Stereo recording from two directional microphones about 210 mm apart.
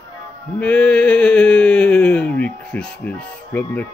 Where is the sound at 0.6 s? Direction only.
5° left (ahead or behind).